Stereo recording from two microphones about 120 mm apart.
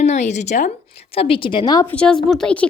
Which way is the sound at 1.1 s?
50° left (ahead or behind).